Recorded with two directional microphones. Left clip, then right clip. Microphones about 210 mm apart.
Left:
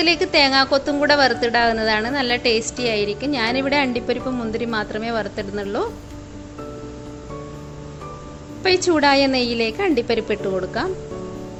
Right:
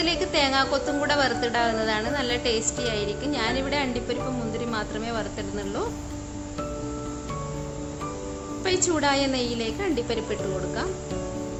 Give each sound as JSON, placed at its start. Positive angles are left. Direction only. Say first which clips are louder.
{"t": 0.0, "sound": "a woman's voice", "louder": "left 7 dB", "side_deg": 25}
{"t": 8.6, "sound": "a woman's voice", "louder": "left 7 dB", "side_deg": 25}